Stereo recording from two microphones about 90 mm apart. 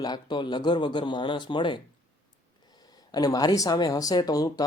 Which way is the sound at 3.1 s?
45° left (ahead or behind).